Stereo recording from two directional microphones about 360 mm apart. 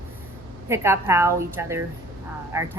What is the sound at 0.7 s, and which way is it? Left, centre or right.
Speech, centre.